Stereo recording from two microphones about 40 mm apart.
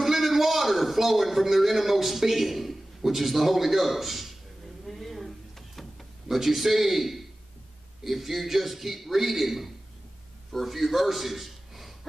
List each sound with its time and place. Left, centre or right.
0.0 s a man's voice: centre
4.8 s a sound: centre
6.2 s a man's voice: centre